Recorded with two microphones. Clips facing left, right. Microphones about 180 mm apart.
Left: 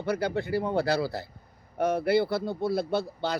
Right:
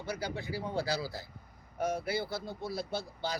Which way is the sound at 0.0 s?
60° left (ahead or behind).